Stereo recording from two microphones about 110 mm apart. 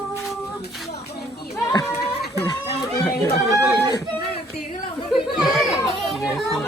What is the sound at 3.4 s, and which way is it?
Speech, 25° right (ahead or behind).